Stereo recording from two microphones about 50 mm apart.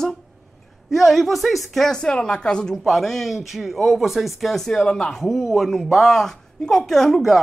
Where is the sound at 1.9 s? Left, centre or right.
Centre.